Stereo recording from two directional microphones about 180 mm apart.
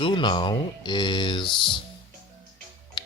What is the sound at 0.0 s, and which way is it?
Speech, 25° left (ahead or behind).